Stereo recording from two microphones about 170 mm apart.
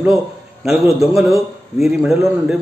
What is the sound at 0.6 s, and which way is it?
Speech, centre (ahead or behind).